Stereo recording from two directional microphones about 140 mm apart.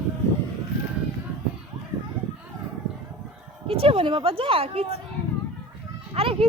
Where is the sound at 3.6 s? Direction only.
45° right (ahead or behind).